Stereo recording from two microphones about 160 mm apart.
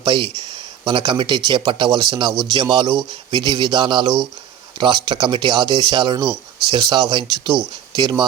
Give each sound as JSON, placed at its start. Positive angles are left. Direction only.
{"t": 0.0, "sound": "speech", "side_deg": -30}